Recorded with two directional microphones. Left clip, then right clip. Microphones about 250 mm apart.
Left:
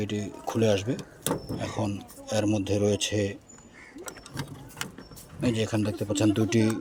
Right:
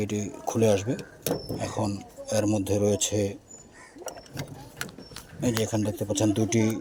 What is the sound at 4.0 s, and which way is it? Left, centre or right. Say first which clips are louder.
Vehicle: right 3 dB; left.